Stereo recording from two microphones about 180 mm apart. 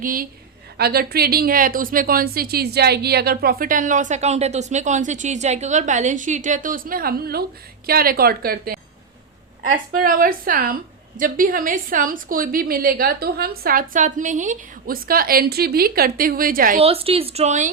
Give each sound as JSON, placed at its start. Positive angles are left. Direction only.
{"t": 0.0, "sound": "a woman's voice", "side_deg": -50}
{"t": 16.7, "sound": "a woman's voice", "side_deg": -35}